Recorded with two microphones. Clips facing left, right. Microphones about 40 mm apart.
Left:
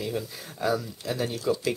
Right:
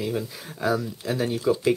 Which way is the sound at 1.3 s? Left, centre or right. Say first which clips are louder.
Right 6 dB; right.